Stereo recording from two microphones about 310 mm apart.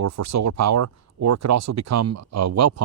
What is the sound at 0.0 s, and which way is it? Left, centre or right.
Speech, right.